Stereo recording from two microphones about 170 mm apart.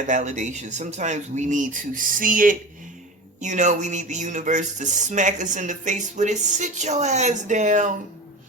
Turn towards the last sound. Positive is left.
turn(degrees=-45)  # may be behind; listen again after turning